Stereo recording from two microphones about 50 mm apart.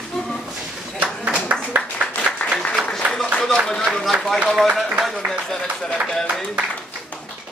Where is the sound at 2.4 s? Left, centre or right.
Left.